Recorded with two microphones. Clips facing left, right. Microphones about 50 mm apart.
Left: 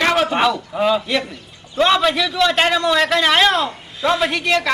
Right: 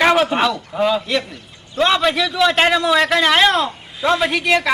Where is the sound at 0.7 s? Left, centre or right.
Centre.